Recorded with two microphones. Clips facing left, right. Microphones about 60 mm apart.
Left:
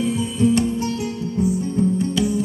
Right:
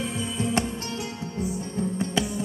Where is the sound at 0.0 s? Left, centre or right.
Right.